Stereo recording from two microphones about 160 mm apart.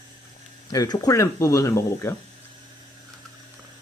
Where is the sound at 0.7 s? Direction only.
25° left (ahead or behind).